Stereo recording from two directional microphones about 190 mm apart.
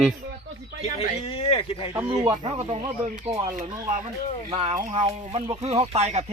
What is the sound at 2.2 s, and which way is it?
Speech, 30° right (ahead or behind).